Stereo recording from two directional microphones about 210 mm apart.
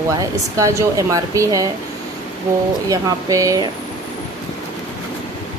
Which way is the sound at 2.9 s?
15° right (ahead or behind).